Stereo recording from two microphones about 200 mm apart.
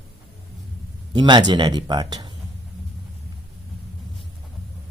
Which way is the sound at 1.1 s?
20° right (ahead or behind).